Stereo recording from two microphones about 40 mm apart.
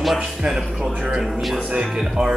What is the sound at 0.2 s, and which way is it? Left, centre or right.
Speech, centre.